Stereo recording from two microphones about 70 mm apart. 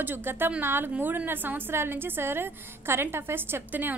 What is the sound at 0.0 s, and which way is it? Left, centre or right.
A woman's voice, right.